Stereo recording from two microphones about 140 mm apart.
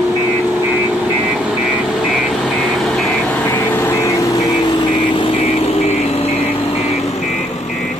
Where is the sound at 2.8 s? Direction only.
Centre (ahead or behind); by 4.5 s 20° left (ahead or behind).